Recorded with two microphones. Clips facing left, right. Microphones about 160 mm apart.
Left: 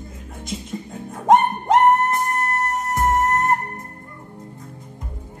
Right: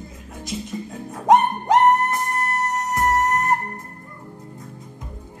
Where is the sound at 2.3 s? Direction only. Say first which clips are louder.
Left 1 dB; centre (ahead or behind).